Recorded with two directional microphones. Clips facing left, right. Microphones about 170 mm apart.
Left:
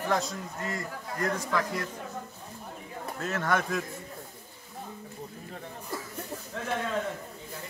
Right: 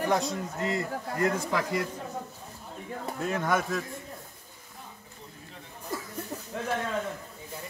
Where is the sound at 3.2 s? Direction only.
10° right (ahead or behind).